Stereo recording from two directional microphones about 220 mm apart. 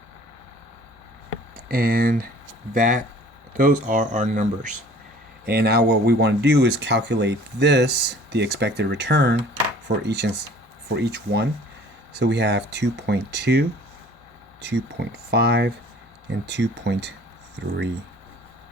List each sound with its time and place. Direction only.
1.6 s speech: 40° right (ahead or behind)
5.5 s speech: 45° right (ahead or behind)